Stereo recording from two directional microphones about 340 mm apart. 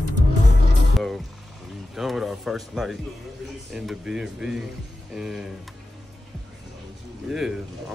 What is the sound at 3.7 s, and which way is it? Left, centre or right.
Speech, centre.